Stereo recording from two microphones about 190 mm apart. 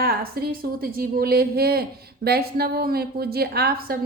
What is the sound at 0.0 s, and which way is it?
A woman's voice, 55° right (ahead or behind).